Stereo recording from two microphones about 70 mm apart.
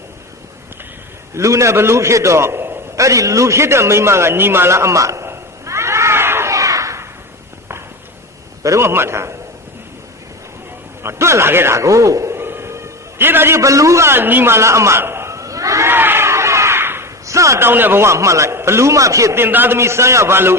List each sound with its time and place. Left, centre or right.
1.4 s a man's voice: right
3.0 s a man's voice: right
6.5 s a sound: right
8.6 s a man's voice: right
8.9 s a man's voice: right
11.0 s a man's voice: right
13.6 s a man's voice: right
15.9 s crowd: right
17.2 s a sound: right
17.6 s a man's voice: right
19.4 s a man's voice: right